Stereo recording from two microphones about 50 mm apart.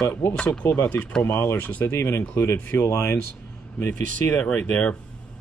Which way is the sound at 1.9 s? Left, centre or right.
Left.